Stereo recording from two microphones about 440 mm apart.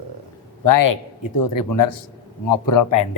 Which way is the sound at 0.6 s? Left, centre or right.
Left.